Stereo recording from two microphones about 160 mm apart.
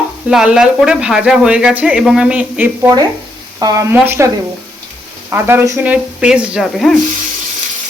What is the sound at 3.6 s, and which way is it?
Speech, 25° right (ahead or behind).